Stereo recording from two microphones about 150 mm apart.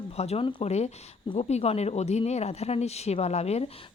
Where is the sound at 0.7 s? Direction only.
45° left (ahead or behind).